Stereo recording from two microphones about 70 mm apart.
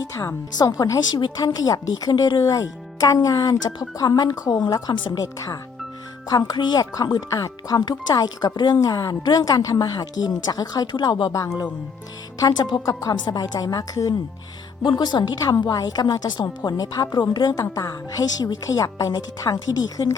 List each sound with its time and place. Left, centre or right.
0.0 s speech: left
2.4 s speech: left
7.3 s speech: left
11.3 s speech: left
12.4 s speech: left
12.9 s speech: left
14.8 s speech: left
15.6 s speech: left
16.2 s speech: left
17.6 s speech: left
19.5 s speech: left